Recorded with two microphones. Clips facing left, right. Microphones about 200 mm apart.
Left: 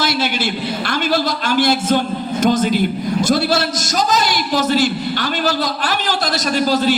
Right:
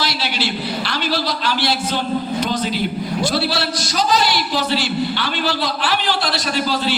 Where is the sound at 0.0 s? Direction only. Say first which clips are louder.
Left 4 dB; 50° left (ahead or behind).